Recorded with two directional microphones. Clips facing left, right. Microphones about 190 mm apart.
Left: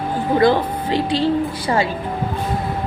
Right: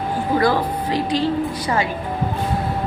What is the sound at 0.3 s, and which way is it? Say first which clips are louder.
A woman's voice: left 3 dB; 25° left (ahead or behind).